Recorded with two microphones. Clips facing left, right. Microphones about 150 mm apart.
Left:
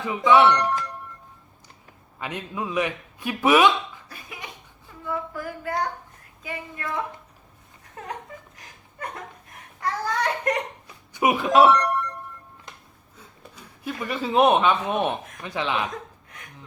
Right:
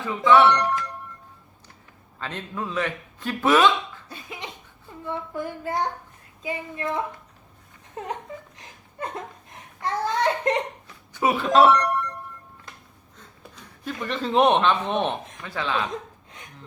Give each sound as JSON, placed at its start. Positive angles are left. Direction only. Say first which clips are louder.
{"t": 0.4, "sound": "music", "louder": "even", "side_deg": 0}
{"t": 2.1, "sound": "a man's voice", "louder": "left 1 dB", "side_deg": 10}
{"t": 4.1, "sound": "cough", "louder": "right 3 dB", "side_deg": -25}
{"t": 5.0, "sound": "child singing", "louder": "even", "side_deg": -25}
{"t": 8.5, "sound": "a sound", "louder": "right 4 dB", "side_deg": -25}
{"t": 10.8, "sound": "hiccup", "louder": "left 4 dB", "side_deg": 15}
{"t": 11.4, "sound": "a sound", "louder": "even", "side_deg": 0}
{"t": 13.1, "sound": "speech", "louder": "even", "side_deg": 10}
{"t": 15.9, "sound": "chuckle", "louder": "right 2 dB", "side_deg": -20}